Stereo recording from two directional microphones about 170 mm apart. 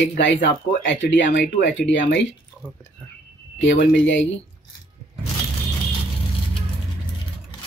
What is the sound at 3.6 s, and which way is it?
Speech, 90° left.